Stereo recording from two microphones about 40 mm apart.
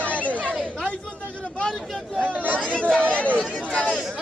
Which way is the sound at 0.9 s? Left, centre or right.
Left.